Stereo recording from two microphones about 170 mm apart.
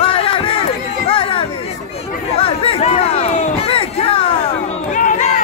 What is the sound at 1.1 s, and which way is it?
Chatter, 30° left (ahead or behind).